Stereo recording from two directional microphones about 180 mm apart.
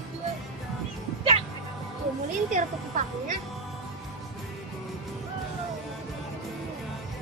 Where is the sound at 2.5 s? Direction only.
45° right (ahead or behind).